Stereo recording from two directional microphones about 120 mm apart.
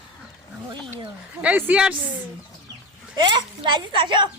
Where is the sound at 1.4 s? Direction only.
15° right (ahead or behind).